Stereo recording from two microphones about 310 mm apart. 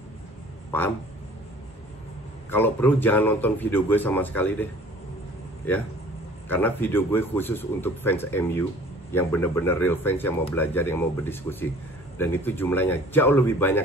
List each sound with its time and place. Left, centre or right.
2.5 s a man's voice: centre
6.5 s a man's voice: centre